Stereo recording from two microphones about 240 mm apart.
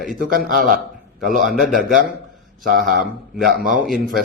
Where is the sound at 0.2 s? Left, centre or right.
Right.